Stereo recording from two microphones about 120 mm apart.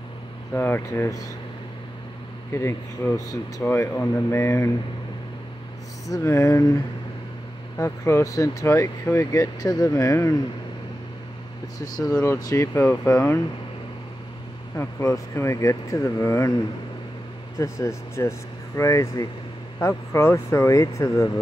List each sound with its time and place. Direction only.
0.5 s speech: 20° left (ahead or behind)
2.5 s speech: 20° left (ahead or behind)
6.0 s speech: 25° left (ahead or behind)
11.8 s speech: 30° left (ahead or behind)
12.7 s speech: 20° left (ahead or behind)
14.8 s speech: 25° left (ahead or behind)
17.6 s speech: 25° left (ahead or behind)